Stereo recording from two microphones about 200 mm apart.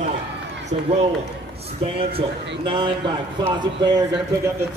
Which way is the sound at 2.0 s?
25° right (ahead or behind).